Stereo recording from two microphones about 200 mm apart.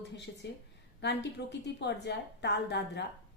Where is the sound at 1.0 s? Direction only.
60° left (ahead or behind).